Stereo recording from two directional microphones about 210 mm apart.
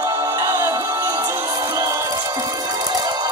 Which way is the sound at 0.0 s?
15° right (ahead or behind).